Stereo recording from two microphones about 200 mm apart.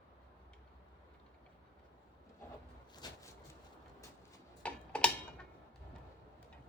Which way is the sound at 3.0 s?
20° left (ahead or behind).